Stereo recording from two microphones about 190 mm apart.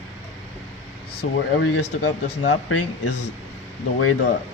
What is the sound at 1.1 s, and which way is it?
Speech, 65° left (ahead or behind).